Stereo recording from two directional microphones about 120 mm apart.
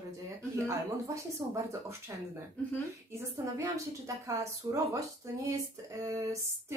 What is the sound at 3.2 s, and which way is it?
Speech, 25° right (ahead or behind).